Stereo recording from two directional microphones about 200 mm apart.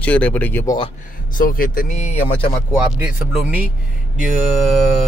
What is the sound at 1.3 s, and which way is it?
Speech, 45° left (ahead or behind).